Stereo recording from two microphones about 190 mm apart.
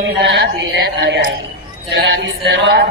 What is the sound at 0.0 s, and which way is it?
A man's voice, 60° right (ahead or behind).